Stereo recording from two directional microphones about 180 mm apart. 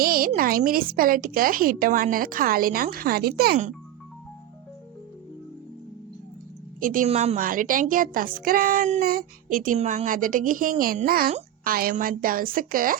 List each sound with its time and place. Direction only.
0.0 s a sound: 55° right (ahead or behind)
0.3 s a woman's voice: 55° right (ahead or behind)
6.7 s a woman's voice: 50° right (ahead or behind)
7.1 s a woman's voice: 35° right (ahead or behind)
7.3 s a woman's voice: 50° right (ahead or behind)